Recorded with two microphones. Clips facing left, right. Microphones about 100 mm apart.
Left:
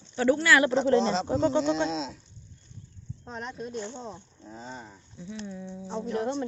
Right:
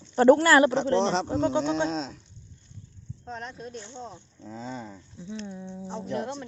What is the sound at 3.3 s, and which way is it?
Speech, 5° left (ahead or behind).